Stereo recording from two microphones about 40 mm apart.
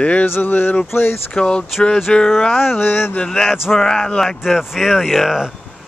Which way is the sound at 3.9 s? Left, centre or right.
Left.